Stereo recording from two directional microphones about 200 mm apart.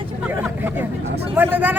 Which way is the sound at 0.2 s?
5° right (ahead or behind).